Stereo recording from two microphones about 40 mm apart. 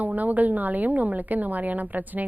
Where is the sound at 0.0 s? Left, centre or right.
Right.